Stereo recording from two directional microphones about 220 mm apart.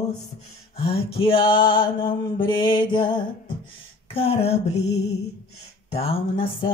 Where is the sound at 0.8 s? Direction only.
25° left (ahead or behind).